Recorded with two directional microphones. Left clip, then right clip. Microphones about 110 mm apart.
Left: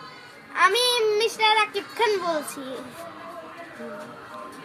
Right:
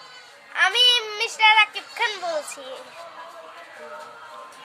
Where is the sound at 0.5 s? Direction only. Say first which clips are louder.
Right 2 dB; 15° right (ahead or behind).